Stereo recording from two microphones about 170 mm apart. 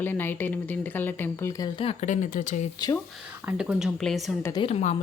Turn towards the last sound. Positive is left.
turn(degrees=35)  # may be behind; listen again after turning